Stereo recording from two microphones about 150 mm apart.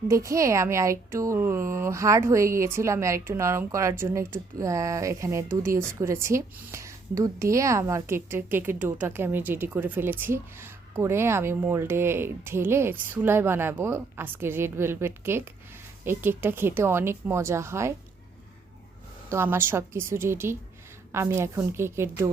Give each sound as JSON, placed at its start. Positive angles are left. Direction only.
{"t": 0.1, "sound": "a woman's voice", "side_deg": -20}
{"t": 19.3, "sound": "a woman's voice", "side_deg": -15}